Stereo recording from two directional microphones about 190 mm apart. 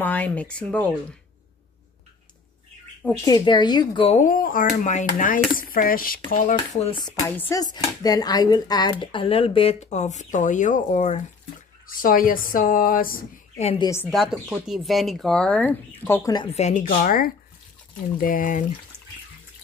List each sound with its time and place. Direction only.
0.0 s speech: 10° left (ahead or behind)
3.3 s speech: 20° left (ahead or behind); by 6.5 s 45° left (ahead or behind)
7.1 s speech: 10° left (ahead or behind); by 13.2 s 50° left (ahead or behind)
13.6 s a woman's voice: 30° left (ahead or behind)
14.1 s speech: centre (ahead or behind); by 16.4 s 15° left (ahead or behind)
16.5 s speech: 40° left (ahead or behind)